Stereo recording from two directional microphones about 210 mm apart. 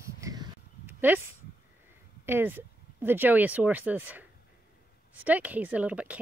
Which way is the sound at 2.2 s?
10° right (ahead or behind).